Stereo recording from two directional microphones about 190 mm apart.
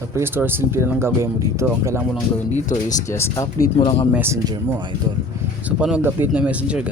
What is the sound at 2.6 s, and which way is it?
Speech, 40° left (ahead or behind).